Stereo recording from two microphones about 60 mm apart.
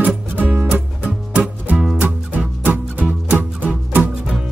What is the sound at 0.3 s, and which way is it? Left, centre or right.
Music, right.